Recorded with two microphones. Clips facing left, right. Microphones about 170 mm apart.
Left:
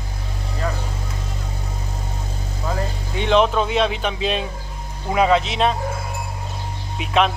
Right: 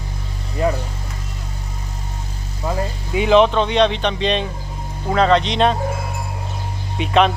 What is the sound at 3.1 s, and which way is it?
Speech, 5° right (ahead or behind).